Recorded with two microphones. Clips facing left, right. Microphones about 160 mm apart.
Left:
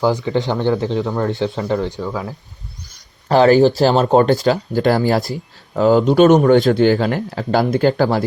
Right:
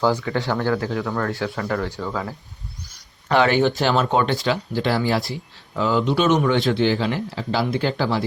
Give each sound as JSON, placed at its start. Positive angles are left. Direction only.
{"t": 0.0, "sound": "speech", "side_deg": 20}
{"t": 3.2, "sound": "speech", "side_deg": 35}